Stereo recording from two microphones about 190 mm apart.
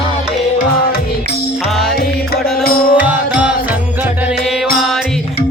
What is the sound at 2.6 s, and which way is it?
Music, 50° left (ahead or behind).